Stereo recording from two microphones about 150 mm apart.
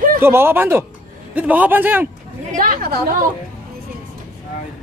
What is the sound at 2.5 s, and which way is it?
Speech, 70° right (ahead or behind).